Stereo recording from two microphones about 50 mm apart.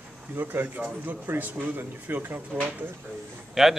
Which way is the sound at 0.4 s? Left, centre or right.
Right.